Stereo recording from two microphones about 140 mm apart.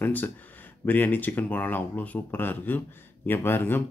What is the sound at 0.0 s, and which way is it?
Speech, 15° left (ahead or behind).